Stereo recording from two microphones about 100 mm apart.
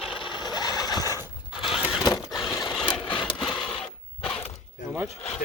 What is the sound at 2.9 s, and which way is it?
Engine, 55° left (ahead or behind).